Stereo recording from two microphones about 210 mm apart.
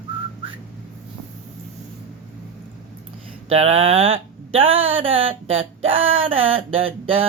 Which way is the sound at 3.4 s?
30° right (ahead or behind).